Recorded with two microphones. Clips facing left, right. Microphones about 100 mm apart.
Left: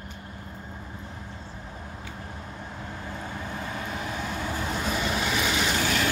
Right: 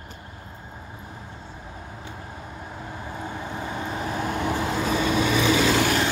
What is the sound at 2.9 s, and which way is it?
Vehicle, 20° right (ahead or behind).